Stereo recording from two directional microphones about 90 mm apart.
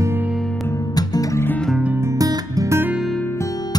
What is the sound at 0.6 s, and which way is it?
Music, 40° left (ahead or behind).